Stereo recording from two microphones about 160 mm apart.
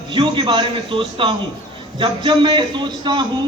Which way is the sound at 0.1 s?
30° right (ahead or behind).